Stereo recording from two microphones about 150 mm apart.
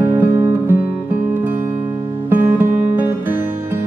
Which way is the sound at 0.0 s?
15° right (ahead or behind).